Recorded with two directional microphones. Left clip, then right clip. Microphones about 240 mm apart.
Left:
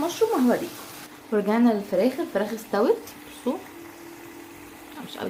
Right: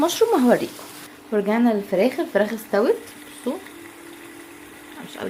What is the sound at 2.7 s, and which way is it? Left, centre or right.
Speech, centre.